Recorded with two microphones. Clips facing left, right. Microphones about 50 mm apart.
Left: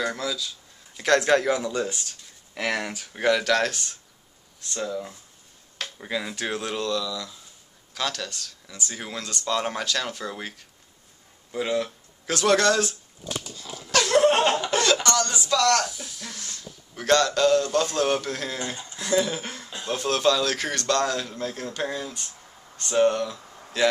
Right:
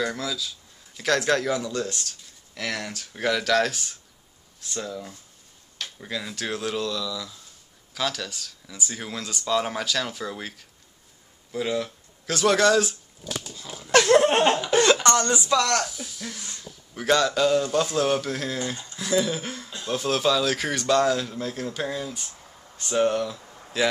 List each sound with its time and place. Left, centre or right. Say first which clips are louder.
0.0 s speech: even; centre
13.6 s dog: even; centre
14.1 s laughter: left 2 dB; centre
14.7 s a sound: right 3 dB; right
15.0 s speech: right 3 dB; right
15.9 s speech: right 2 dB; centre
16.3 s speech: even; centre
16.9 s speech: left 1 dB; centre